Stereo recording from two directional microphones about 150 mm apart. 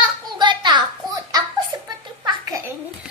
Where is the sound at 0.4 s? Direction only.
30° right (ahead or behind).